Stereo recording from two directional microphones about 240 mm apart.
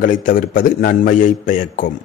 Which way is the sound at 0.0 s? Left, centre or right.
Left.